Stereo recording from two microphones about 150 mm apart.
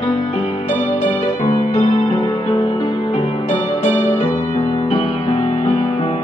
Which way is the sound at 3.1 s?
35° left (ahead or behind).